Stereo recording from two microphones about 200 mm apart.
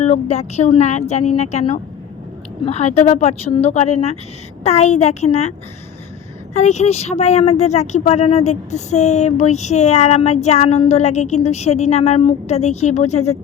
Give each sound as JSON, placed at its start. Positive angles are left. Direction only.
{"t": 0.0, "sound": "speech", "side_deg": 35}